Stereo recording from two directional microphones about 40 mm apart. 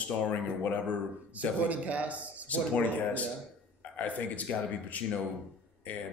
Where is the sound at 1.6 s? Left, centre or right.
Right.